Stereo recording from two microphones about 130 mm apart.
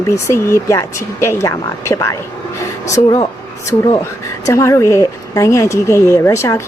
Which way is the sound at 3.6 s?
25° left (ahead or behind).